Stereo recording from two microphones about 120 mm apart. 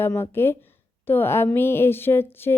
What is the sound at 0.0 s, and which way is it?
A woman's voice, 20° left (ahead or behind).